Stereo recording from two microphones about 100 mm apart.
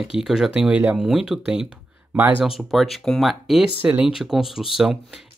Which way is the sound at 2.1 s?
20° right (ahead or behind).